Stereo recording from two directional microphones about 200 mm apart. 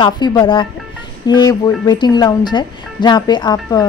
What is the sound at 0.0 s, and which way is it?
A woman's voice, 20° left (ahead or behind).